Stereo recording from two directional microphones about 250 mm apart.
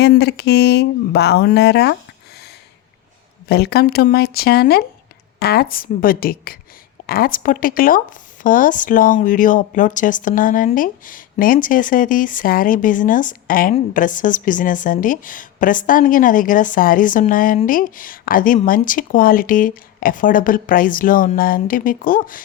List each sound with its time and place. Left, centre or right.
0.0 s speech: left
3.5 s speech: left